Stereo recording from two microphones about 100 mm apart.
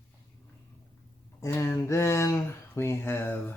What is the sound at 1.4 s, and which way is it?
Speech, 25° left (ahead or behind).